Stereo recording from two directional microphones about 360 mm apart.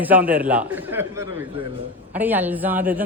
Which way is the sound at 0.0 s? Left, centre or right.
Centre.